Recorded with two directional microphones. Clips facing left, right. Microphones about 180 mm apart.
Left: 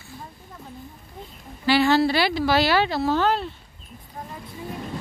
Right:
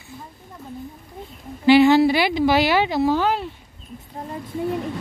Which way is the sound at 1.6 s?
20° right (ahead or behind).